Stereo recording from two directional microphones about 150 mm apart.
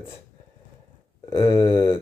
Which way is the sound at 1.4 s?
30° left (ahead or behind).